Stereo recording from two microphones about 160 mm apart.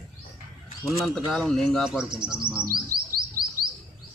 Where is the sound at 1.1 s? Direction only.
Centre (ahead or behind).